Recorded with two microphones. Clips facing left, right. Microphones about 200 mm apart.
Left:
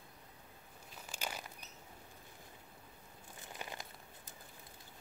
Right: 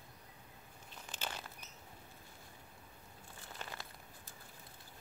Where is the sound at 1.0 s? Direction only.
10° left (ahead or behind).